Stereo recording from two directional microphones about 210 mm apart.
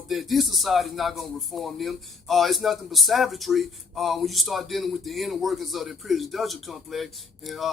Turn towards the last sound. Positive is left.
turn(degrees=0)  # may be behind; listen again after turning